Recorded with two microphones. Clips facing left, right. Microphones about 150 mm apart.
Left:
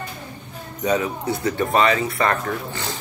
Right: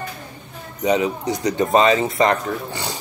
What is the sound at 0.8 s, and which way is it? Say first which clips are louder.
Speech: right 2 dB; 15° right (ahead or behind).